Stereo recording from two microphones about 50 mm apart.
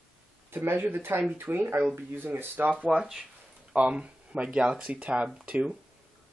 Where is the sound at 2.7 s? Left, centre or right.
Right.